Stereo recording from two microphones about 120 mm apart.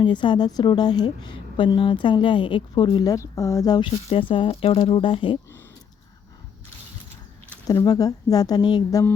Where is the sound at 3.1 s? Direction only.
25° left (ahead or behind).